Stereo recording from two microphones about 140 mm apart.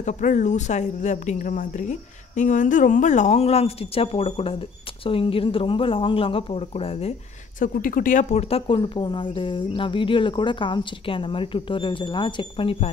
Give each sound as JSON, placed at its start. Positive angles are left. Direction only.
{"t": 0.0, "sound": "speech", "side_deg": 60}
{"t": 7.5, "sound": "speech", "side_deg": 75}